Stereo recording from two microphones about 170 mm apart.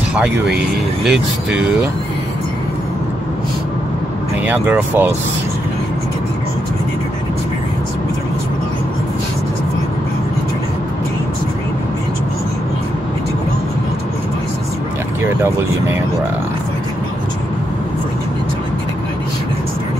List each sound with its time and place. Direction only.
0.1 s speech: 5° right (ahead or behind)
4.5 s speech: 10° right (ahead or behind)
15.2 s speech: 15° right (ahead or behind)